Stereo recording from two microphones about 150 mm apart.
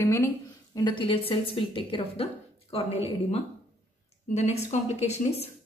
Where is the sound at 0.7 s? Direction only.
30° left (ahead or behind).